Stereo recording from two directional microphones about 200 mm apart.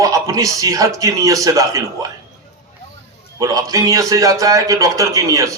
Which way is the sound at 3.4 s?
20° right (ahead or behind).